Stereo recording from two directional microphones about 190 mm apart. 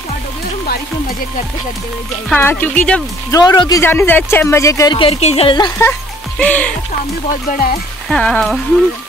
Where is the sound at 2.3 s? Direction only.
10° left (ahead or behind).